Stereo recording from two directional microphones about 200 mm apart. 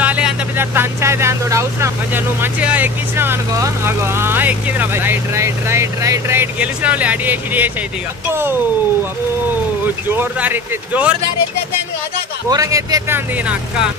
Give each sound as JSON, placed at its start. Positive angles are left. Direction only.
{"t": 0.0, "sound": "speech", "side_deg": -5}
{"t": 10.0, "sound": "speech", "side_deg": -10}
{"t": 12.4, "sound": "speech", "side_deg": -15}